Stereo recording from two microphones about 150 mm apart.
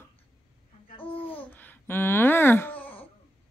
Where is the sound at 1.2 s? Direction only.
10° left (ahead or behind).